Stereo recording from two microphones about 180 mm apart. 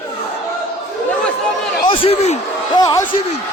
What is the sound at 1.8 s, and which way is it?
Speech, 30° left (ahead or behind).